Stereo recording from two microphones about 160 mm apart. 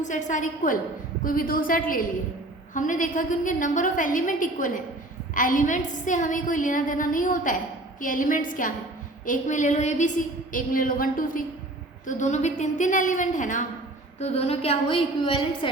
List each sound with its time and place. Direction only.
0.0 s a woman's voice: 50° left (ahead or behind)
12.0 s a woman's voice: 50° left (ahead or behind)
14.2 s a woman's voice: 40° left (ahead or behind)